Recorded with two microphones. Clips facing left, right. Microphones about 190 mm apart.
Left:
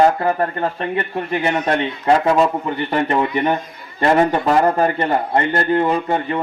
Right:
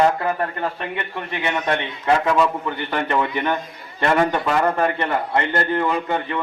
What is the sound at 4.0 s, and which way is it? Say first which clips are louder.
A man's voice: left 4 dB; 35° left (ahead or behind).